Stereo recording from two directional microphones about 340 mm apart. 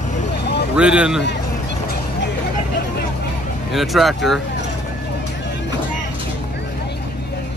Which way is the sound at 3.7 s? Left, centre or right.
Centre.